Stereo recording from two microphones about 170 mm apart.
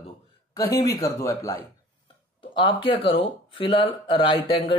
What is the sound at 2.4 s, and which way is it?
Speech, 30° left (ahead or behind).